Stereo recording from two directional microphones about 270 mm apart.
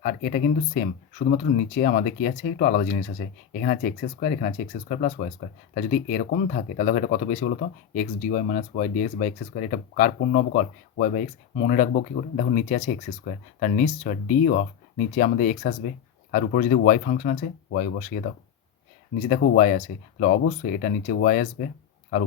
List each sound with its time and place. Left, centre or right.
0.0 s speech: left
19.3 s speech: left